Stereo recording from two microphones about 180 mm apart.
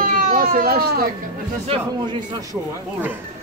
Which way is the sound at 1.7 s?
25° right (ahead or behind).